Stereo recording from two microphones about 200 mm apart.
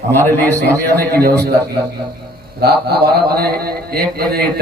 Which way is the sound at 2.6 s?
50° right (ahead or behind).